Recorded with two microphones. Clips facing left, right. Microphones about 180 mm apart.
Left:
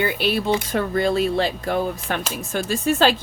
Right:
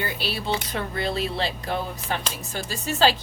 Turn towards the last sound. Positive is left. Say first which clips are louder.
# left 4 dB
turn(degrees=55)  # may be behind; listen again after turning